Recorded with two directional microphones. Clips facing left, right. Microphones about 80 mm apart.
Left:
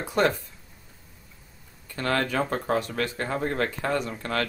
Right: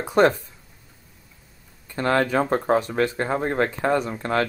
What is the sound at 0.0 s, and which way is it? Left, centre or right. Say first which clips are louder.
Speech: right 6 dB; right.